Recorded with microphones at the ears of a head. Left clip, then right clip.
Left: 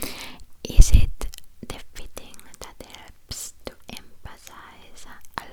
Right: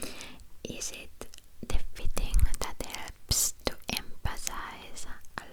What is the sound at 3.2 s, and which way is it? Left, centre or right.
Whispering, right.